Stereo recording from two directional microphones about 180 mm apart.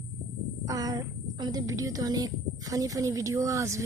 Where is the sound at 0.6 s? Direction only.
20° right (ahead or behind).